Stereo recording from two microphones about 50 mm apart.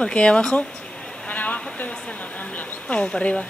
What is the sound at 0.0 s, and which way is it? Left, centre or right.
Speech, left.